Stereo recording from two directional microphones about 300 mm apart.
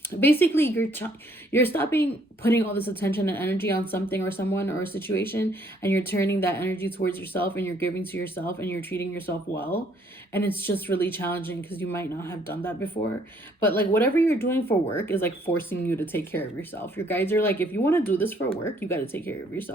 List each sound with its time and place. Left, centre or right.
0.2 s speech: centre